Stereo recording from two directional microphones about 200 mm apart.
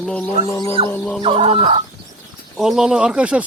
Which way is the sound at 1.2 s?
30° right (ahead or behind).